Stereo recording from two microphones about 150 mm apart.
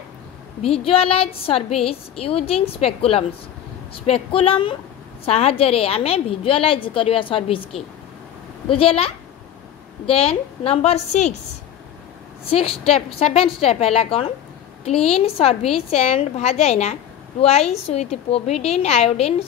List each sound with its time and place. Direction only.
0.8 s a woman's voice: 40° left (ahead or behind)
12.4 s a woman's voice: 40° left (ahead or behind)